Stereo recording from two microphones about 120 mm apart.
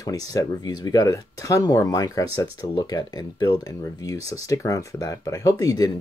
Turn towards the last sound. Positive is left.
turn(degrees=30)  # may be behind; listen again after turning